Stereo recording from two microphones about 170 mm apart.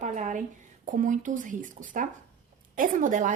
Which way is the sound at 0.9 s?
50° right (ahead or behind).